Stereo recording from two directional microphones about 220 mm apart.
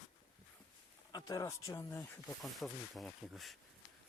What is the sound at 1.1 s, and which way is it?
Speech, 15° left (ahead or behind).